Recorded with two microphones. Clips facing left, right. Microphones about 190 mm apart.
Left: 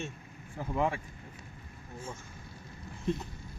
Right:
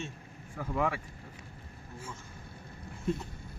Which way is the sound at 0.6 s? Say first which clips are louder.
Left 1 dB; 25° left (ahead or behind).